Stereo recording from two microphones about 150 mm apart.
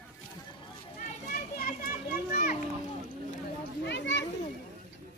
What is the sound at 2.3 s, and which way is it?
Children playing, 90° left.